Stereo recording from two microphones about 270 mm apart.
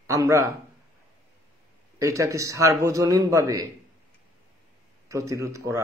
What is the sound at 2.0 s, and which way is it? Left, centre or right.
Speech, centre.